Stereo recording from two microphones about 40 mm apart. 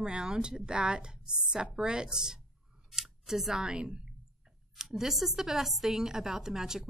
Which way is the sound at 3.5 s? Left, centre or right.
Centre.